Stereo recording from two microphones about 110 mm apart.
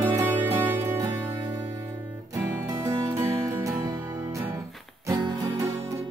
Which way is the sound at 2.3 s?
35° right (ahead or behind).